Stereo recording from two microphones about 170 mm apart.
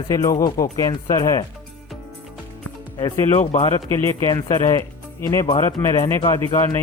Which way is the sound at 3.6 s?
25° left (ahead or behind).